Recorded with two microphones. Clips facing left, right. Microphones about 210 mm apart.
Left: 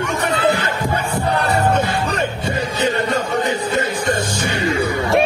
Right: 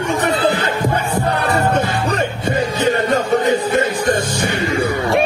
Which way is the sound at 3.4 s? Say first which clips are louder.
Right 4 dB; 50° right (ahead or behind).